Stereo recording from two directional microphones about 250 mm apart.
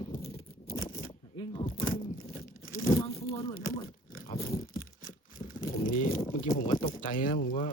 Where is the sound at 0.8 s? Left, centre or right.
Left.